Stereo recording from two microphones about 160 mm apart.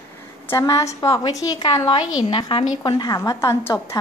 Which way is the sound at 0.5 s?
20° left (ahead or behind).